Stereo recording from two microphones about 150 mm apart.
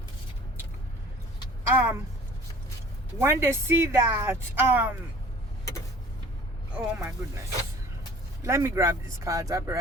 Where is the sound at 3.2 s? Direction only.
15° right (ahead or behind).